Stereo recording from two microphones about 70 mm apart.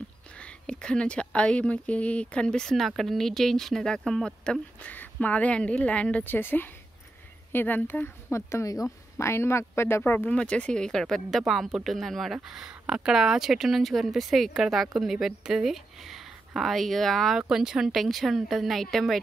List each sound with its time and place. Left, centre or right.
0.4 s speech: centre
4.8 s speech: left
8.3 s speech: left
10.3 s speech: centre
12.4 s speech: centre
17.4 s speech: centre